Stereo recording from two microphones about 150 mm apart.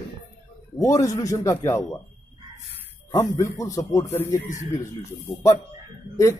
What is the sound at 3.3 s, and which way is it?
Speech, 20° left (ahead or behind).